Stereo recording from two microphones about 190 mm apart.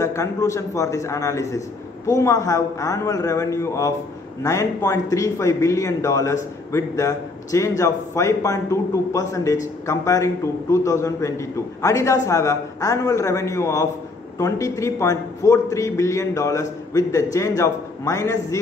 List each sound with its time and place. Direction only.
0.0 s speech: 15° left (ahead or behind)